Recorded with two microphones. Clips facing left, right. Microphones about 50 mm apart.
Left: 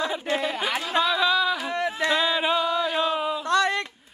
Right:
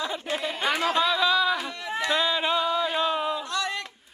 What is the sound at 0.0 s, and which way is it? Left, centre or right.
Chatter, centre.